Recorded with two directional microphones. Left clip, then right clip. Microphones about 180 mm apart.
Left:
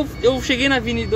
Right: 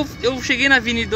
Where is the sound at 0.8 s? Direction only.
5° right (ahead or behind).